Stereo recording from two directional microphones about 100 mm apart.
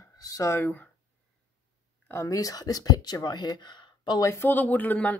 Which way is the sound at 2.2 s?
35° left (ahead or behind).